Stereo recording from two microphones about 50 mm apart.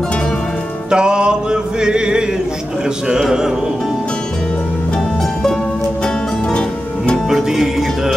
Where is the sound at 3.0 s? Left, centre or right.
Centre.